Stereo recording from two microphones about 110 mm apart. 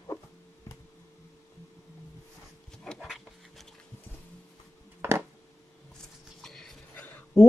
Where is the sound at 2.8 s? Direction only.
5° left (ahead or behind).